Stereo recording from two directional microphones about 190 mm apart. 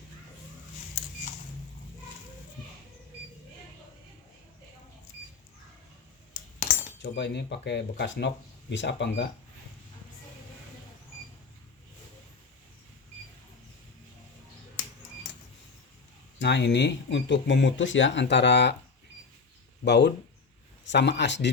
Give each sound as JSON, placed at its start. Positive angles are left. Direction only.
{"t": 7.0, "sound": "speech", "side_deg": 65}
{"t": 16.4, "sound": "speech", "side_deg": 65}
{"t": 19.8, "sound": "speech", "side_deg": 65}